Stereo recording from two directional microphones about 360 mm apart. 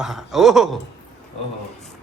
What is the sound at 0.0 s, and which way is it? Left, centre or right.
Speech, centre.